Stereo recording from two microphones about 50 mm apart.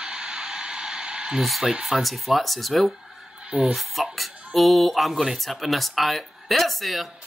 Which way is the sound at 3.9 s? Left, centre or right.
Centre.